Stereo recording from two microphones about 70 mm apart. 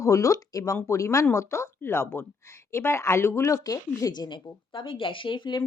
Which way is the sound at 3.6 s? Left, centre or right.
Left.